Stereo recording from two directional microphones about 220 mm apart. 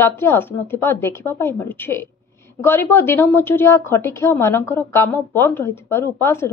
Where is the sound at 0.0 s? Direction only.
10° left (ahead or behind).